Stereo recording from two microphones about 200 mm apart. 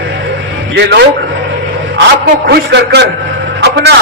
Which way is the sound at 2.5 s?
55° right (ahead or behind).